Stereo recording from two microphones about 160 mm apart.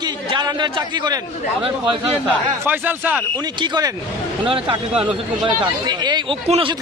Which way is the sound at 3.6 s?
25° right (ahead or behind).